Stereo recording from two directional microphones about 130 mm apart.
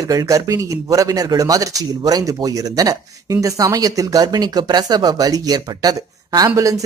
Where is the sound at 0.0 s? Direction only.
25° right (ahead or behind).